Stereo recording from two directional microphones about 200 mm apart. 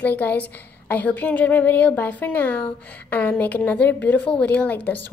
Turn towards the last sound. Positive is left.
turn(degrees=10)  # may be behind; listen again after turning